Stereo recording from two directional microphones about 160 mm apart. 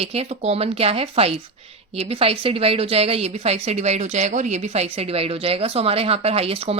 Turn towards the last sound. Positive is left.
turn(degrees=-35)  # may be behind; listen again after turning